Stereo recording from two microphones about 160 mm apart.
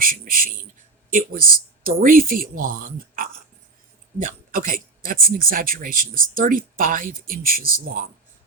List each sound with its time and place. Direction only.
0.0 s speech: 60° right (ahead or behind)